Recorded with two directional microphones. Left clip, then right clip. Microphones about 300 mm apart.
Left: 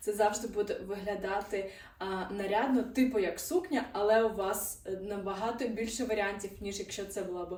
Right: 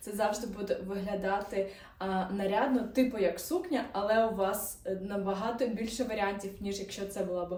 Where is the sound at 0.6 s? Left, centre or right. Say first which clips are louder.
Right 2 dB; centre.